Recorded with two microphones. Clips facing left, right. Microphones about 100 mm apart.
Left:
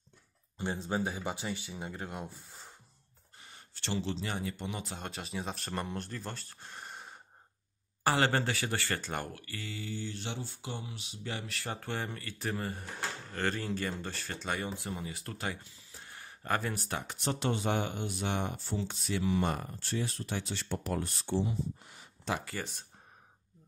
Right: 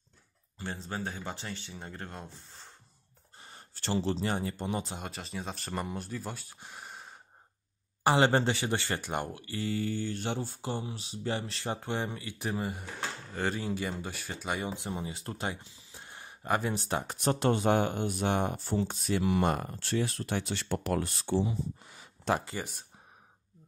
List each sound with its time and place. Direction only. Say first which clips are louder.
0.6 s speech: left 4 dB; 15° left (ahead or behind)
3.3 s speech: right 3 dB; 35° right (ahead or behind)
4.9 s speech: even; centre (ahead or behind)
8.0 s speech: right 4 dB; 20° right (ahead or behind)
9.7 s speech: right 8 dB; 50° right (ahead or behind); by 17.0 s 25° right (ahead or behind)
17.0 s speech: right 6 dB; 40° right (ahead or behind)
19.7 s speech: right 4 dB; 80° right
22.4 s speech: right 2 dB; 20° right (ahead or behind)